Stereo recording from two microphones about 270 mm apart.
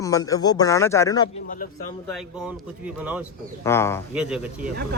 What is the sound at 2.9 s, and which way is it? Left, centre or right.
Speech, centre.